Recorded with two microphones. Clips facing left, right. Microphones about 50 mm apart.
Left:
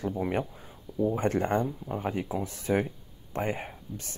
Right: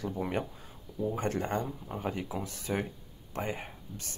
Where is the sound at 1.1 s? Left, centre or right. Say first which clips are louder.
Left 4 dB; left.